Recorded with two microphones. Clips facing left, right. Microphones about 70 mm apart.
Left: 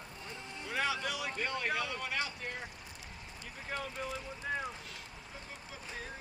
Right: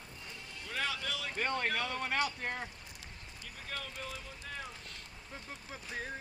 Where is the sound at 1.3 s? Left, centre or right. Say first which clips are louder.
Right 4 dB; right.